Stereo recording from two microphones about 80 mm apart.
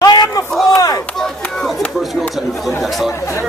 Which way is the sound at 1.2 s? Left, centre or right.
Centre.